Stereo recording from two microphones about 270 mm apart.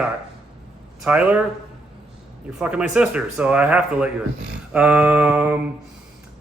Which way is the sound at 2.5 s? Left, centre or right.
Centre.